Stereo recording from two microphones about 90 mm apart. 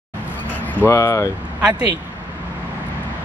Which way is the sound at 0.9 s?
35° left (ahead or behind).